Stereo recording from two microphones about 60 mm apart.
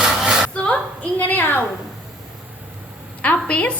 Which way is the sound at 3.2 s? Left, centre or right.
Left.